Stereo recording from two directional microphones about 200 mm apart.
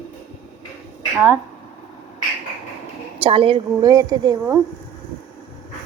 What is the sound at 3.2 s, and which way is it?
A woman's voice, 25° right (ahead or behind).